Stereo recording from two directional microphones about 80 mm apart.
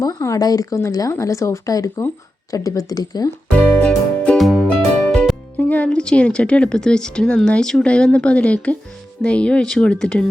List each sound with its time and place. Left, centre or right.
0.0 s speech: left
3.8 s music: centre
4.4 s music: centre
4.7 s music: centre
5.5 s speech: centre